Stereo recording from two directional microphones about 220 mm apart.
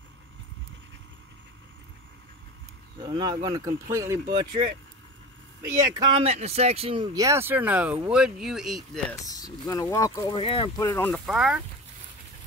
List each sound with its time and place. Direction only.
3.0 s speech: 20° right (ahead or behind)
5.6 s speech: 15° right (ahead or behind); by 9.0 s centre (ahead or behind)
9.2 s speech: 15° left (ahead or behind)
11.1 s speech: 5° right (ahead or behind)